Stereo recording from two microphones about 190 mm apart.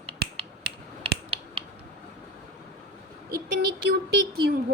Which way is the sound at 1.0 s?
30° right (ahead or behind).